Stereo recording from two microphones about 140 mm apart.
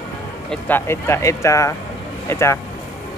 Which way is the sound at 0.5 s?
10° left (ahead or behind).